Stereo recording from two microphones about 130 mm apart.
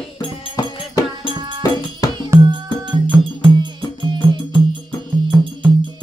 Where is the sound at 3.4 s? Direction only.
35° right (ahead or behind).